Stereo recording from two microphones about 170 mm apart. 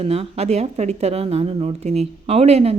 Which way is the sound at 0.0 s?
40° right (ahead or behind).